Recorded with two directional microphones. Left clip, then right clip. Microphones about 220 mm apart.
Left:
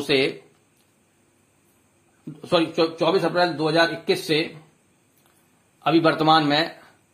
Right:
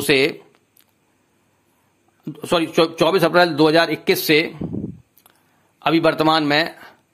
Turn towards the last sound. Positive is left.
turn(degrees=-30)  # may be behind; listen again after turning